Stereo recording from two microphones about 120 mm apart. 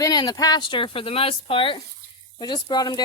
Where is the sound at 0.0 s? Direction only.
35° left (ahead or behind).